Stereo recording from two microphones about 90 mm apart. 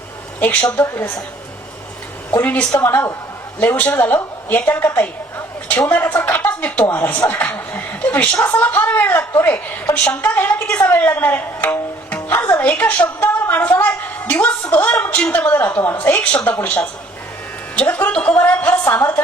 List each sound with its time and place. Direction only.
0.3 s a woman's voice: 20° left (ahead or behind)
2.4 s a woman's voice: 15° left (ahead or behind)
2.7 s a woman's voice: 25° left (ahead or behind)
5.9 s a sound: 15° left (ahead or behind)
6.9 s a woman's voice: 15° left (ahead or behind)